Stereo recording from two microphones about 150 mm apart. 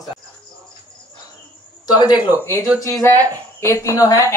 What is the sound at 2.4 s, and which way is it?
Speech, 20° left (ahead or behind).